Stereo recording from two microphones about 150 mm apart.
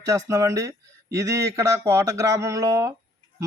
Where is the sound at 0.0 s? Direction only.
20° right (ahead or behind).